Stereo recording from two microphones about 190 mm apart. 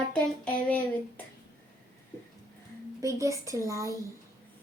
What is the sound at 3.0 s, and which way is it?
Speech, 15° right (ahead or behind).